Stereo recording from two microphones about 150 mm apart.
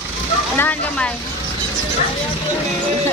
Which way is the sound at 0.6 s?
10° left (ahead or behind).